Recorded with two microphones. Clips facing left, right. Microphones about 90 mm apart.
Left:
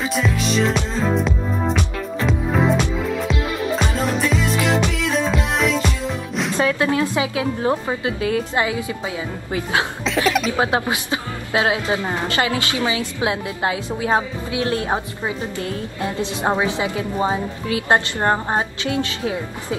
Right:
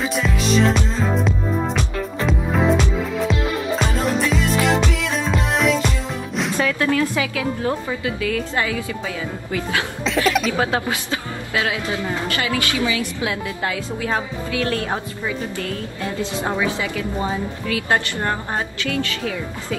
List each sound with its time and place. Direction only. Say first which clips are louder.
0.1 s music: even; centre (ahead or behind)
6.5 s a woman's voice: left 1 dB; 25° left (ahead or behind)
10.0 s a sound: right 2 dB; centre (ahead or behind)
10.6 s a woman's voice: left 1 dB; 20° left (ahead or behind)